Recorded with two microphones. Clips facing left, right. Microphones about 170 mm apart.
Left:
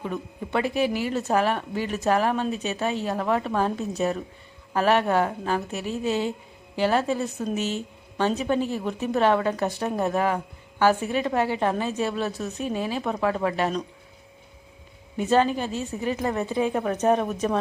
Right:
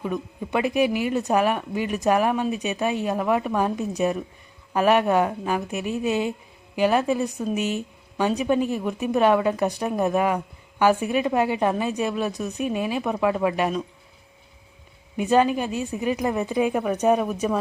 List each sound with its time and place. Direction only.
0.0 s a woman's voice: 15° right (ahead or behind)
15.2 s a woman's voice: 15° right (ahead or behind)